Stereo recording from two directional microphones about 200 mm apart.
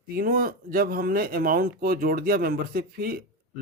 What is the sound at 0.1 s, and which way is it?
Speech, 45° right (ahead or behind).